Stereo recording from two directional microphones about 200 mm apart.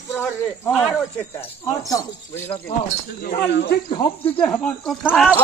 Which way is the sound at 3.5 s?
55° left (ahead or behind).